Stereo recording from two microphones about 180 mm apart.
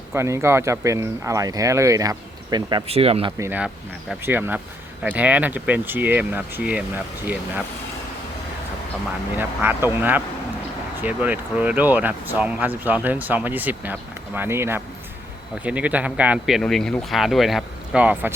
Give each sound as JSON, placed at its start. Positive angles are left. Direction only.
{"t": 0.1, "sound": "speech", "side_deg": -15}
{"t": 3.3, "sound": "speech", "side_deg": -10}
{"t": 9.3, "sound": "speech", "side_deg": -10}